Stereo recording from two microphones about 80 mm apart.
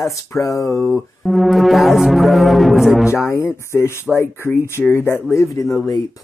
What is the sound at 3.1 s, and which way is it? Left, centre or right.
Speech, left.